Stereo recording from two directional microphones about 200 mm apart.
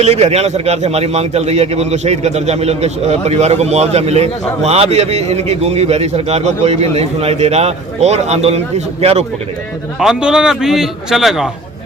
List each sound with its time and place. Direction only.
0.0 s a man's voice: 35° right (ahead or behind)
10.0 s a man's voice: 5° right (ahead or behind)